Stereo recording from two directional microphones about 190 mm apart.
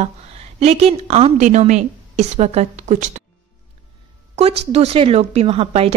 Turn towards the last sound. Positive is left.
turn(degrees=-30)  # may be behind; listen again after turning